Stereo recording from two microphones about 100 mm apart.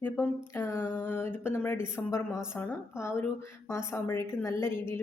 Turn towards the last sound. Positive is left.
turn(degrees=25)  # may be behind; listen again after turning